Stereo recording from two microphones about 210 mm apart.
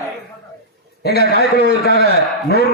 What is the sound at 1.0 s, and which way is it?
A man's voice, 50° left (ahead or behind).